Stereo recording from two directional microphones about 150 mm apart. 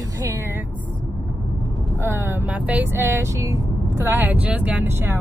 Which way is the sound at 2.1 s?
15° right (ahead or behind).